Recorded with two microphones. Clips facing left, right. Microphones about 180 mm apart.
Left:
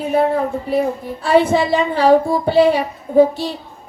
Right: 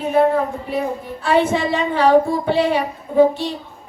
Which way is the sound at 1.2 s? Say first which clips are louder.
Left 3 dB; 35° left (ahead or behind).